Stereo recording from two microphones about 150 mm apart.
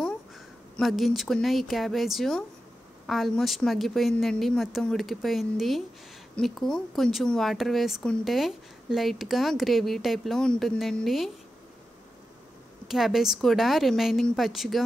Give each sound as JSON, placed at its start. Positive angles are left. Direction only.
{"t": 0.7, "sound": "speech", "side_deg": 0}
{"t": 12.8, "sound": "speech", "side_deg": 0}